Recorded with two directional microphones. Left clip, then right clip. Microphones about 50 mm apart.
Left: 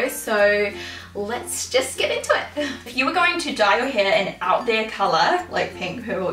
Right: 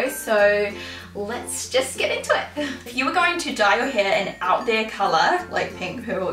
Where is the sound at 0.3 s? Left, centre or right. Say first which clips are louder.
Even; centre.